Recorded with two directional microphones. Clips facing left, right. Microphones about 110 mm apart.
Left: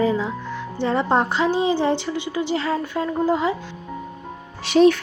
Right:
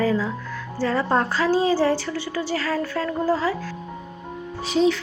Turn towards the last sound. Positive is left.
turn(degrees=70)  # may be behind; listen again after turning